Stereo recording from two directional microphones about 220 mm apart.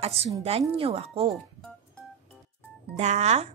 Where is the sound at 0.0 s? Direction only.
25° right (ahead or behind).